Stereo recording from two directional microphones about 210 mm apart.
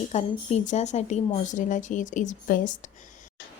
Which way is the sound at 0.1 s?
30° left (ahead or behind).